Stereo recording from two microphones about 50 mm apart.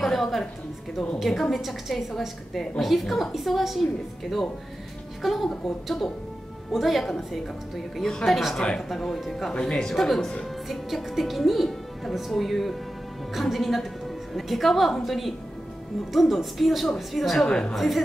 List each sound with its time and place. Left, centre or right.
0.0 s a sound: centre
1.2 s a woman's voice: centre
8.8 s a woman's voice: centre
9.5 s a woman's voice: centre
17.5 s speech: centre
17.7 s a woman's voice: centre